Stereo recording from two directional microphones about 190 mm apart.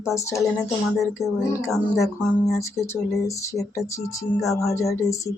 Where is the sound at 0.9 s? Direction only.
Centre (ahead or behind).